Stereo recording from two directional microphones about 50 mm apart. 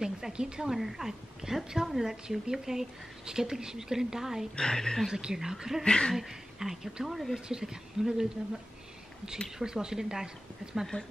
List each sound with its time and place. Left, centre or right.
0.0 s a woman's voice: centre
4.6 s a woman's voice: centre
5.1 s a woman's voice: centre
5.9 s a woman's voice: centre
6.1 s a woman's voice: centre
9.6 s a woman's voice: centre